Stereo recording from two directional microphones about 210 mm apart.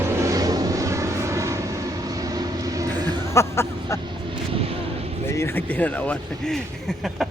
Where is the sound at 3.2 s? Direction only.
15° left (ahead or behind).